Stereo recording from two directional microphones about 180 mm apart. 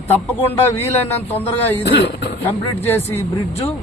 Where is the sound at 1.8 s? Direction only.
70° left (ahead or behind).